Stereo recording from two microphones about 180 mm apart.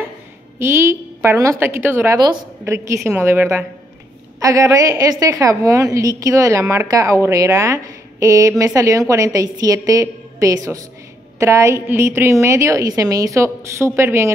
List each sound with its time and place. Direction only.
0.6 s a woman's voice: 15° right (ahead or behind)